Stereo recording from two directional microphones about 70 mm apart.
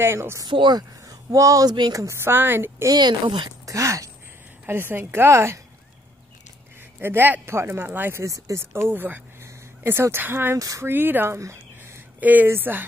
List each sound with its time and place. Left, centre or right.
0.0 s speech: right
0.4 s speech: right
1.0 s a sound: right
1.7 s speech: right
2.0 s speech: right
2.3 s speech: right
2.9 s speech: right
3.7 s speech: right
4.6 s speech: right
7.0 s a man's voice: right
8.2 s speech: right
8.7 s speech: right
11.3 s a sound: right
12.2 s speech: right